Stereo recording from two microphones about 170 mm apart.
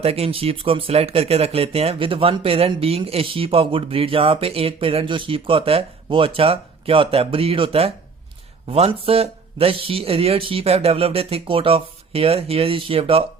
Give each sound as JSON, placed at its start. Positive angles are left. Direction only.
{"t": 0.0, "sound": "speech", "side_deg": -35}